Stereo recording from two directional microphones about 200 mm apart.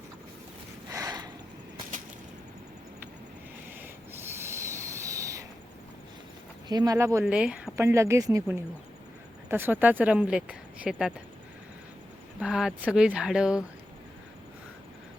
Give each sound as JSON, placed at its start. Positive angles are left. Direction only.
{"t": 0.9, "sound": "a sound", "side_deg": -15}
{"t": 3.8, "sound": "owl", "side_deg": -10}
{"t": 6.7, "sound": "speech", "side_deg": -20}
{"t": 12.4, "sound": "speech", "side_deg": -5}